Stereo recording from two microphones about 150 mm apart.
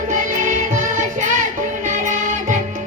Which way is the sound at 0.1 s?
55° right (ahead or behind).